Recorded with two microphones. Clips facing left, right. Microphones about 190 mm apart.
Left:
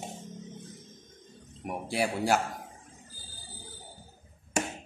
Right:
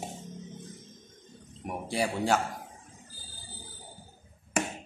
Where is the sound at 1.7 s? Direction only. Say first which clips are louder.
Even; 5° left (ahead or behind).